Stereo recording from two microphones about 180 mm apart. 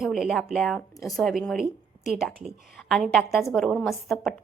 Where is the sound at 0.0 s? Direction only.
Centre (ahead or behind).